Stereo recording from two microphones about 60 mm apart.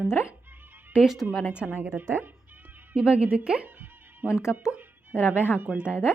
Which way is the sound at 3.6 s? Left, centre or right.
Right.